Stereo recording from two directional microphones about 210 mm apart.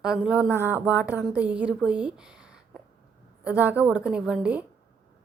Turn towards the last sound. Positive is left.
turn(degrees=-5)  # may be behind; listen again after turning